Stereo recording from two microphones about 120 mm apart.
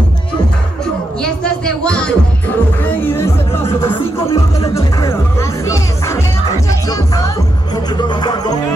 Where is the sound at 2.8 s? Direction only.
20° left (ahead or behind).